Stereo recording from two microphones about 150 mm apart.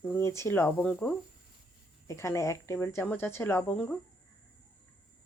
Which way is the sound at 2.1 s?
20° left (ahead or behind).